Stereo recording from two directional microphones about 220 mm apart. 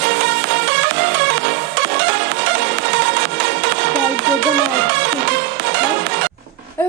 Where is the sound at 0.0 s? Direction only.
55° right (ahead or behind).